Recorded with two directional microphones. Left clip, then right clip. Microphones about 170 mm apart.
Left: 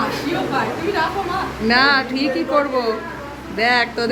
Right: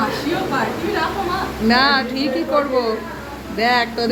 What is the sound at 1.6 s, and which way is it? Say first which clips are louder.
Speech: left 1 dB; 5° left (ahead or behind).